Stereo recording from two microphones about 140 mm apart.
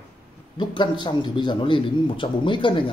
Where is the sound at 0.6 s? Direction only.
35° left (ahead or behind).